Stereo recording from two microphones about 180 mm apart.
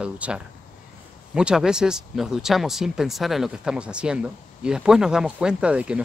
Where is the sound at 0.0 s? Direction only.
5° right (ahead or behind).